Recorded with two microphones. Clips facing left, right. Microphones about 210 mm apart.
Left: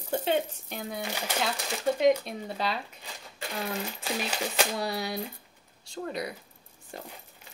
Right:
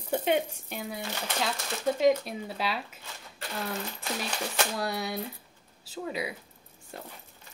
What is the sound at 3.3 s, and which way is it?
Coin, 15° left (ahead or behind).